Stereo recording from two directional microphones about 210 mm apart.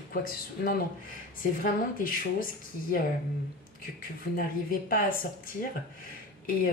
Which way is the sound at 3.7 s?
40° left (ahead or behind).